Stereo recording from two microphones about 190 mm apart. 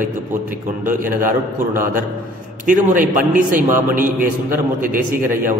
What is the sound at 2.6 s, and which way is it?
A man's voice, 45° right (ahead or behind).